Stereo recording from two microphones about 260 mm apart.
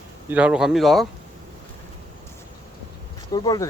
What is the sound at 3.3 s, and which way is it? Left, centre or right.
Speech, centre.